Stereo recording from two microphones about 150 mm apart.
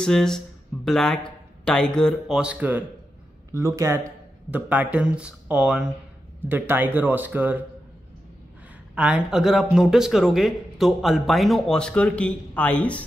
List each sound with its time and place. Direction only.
0.0 s speech: 5° left (ahead or behind)
3.5 s a man's voice: 20° right (ahead or behind)
8.9 s speech: 10° right (ahead or behind); by 13.0 s 10° left (ahead or behind)